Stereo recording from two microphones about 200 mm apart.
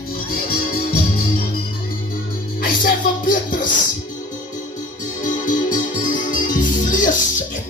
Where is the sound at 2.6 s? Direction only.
45° left (ahead or behind).